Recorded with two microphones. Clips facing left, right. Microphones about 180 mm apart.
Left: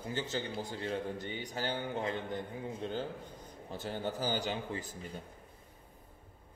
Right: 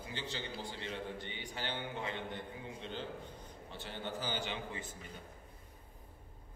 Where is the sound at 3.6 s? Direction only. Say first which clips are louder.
Left 6 dB; 40° left (ahead or behind).